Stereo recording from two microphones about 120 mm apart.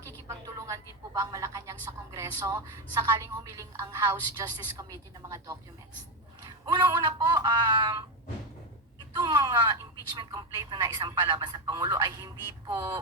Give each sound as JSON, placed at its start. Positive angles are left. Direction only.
{"t": 0.0, "sound": "a woman's voice", "side_deg": -25}
{"t": 9.1, "sound": "speech", "side_deg": -30}